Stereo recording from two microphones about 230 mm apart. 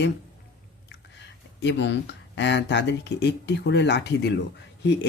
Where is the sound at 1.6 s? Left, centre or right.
Left.